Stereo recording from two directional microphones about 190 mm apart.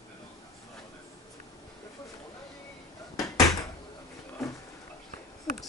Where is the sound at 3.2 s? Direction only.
15° left (ahead or behind).